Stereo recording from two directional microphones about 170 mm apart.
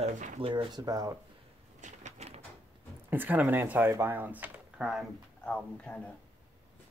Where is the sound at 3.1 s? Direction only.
10° right (ahead or behind).